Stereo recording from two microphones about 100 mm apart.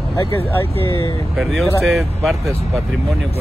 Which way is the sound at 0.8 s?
30° left (ahead or behind).